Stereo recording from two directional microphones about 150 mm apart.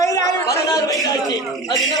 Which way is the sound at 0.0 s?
20° left (ahead or behind).